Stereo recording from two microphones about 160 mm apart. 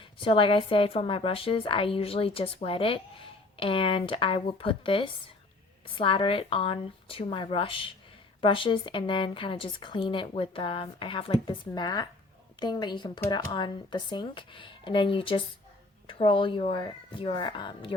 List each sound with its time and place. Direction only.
0.0 s a woman's voice: 30° left (ahead or behind)